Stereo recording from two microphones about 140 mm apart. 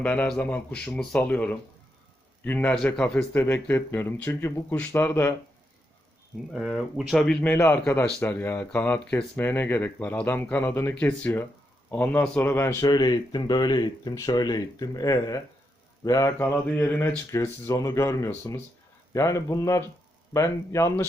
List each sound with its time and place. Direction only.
0.0 s speech: 10° left (ahead or behind)
6.5 s speech: centre (ahead or behind)
7.5 s speech: 15° left (ahead or behind)